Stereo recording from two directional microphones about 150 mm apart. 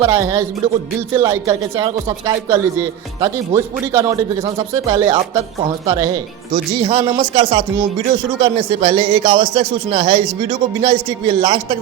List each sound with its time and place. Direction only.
0.0 s speech: 20° right (ahead or behind)
6.8 s a man's voice: 45° right (ahead or behind)
7.1 s speech: 35° right (ahead or behind)